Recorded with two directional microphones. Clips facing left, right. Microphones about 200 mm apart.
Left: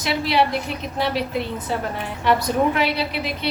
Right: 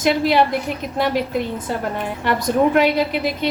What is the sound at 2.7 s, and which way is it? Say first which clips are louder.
Speech: right 6 dB; 45° right (ahead or behind).